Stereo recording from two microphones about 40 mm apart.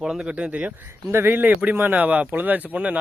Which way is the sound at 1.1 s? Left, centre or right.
Right.